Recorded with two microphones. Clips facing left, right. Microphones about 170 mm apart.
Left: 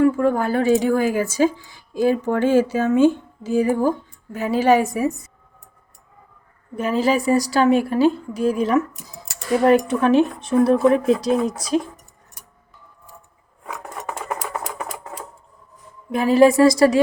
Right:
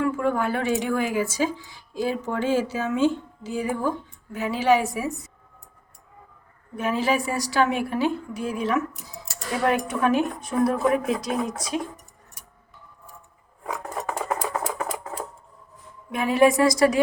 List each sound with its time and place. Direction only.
0.0 s a woman's voice: 40° left (ahead or behind)
6.7 s a woman's voice: 40° left (ahead or behind)
16.1 s speech: 35° left (ahead or behind)